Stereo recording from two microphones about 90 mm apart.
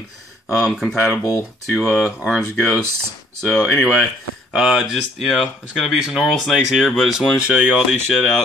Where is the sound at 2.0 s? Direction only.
5° left (ahead or behind).